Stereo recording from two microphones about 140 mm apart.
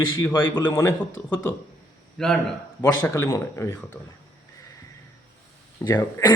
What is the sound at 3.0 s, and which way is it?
Speech, 20° left (ahead or behind).